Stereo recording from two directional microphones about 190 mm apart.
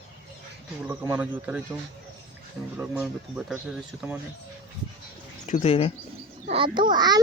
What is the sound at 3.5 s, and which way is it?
Speech, 5° right (ahead or behind).